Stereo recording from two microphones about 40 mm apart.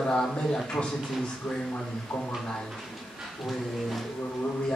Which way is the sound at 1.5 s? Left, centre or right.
Centre.